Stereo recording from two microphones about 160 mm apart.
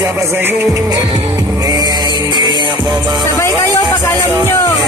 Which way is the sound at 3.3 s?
15° left (ahead or behind).